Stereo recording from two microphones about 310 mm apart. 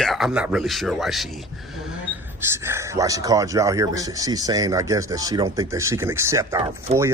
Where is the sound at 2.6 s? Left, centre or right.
Centre.